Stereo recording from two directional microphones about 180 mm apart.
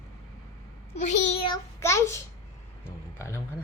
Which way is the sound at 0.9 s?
40° left (ahead or behind).